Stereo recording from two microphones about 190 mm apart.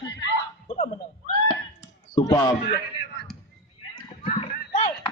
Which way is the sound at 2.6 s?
55° left (ahead or behind).